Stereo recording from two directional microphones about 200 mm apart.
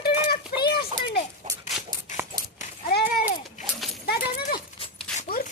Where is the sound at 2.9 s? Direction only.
50° left (ahead or behind).